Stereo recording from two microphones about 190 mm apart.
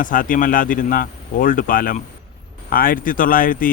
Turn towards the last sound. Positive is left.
turn(degrees=45)  # may be behind; listen again after turning